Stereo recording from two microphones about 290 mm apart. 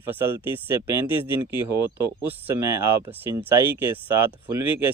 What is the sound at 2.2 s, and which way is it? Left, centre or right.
Speech, centre.